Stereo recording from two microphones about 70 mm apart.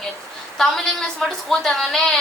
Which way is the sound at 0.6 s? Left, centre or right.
Centre.